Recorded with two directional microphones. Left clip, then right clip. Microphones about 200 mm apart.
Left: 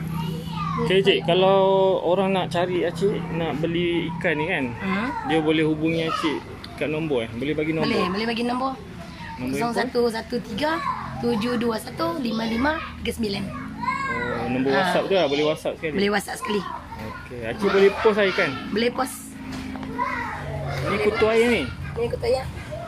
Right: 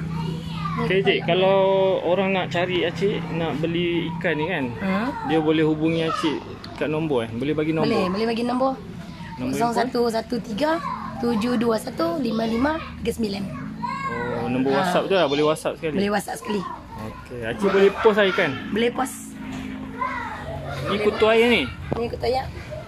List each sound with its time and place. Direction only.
0.8 s speech: 20° left (ahead or behind); by 4.6 s centre (ahead or behind)
4.8 s a child's voice: 45° right (ahead or behind)
5.3 s speech: 5° right (ahead or behind)
7.8 s a child's voice: 45° right (ahead or behind)
14.4 s children playing: 10° right (ahead or behind)
14.7 s speech: 40° right (ahead or behind)
15.0 s speech: 10° right (ahead or behind)
16.0 s a child's voice: 40° right (ahead or behind)
17.5 s speech: 5° right (ahead or behind)
18.8 s speech: 35° right (ahead or behind)
21.2 s speech: 5° right (ahead or behind)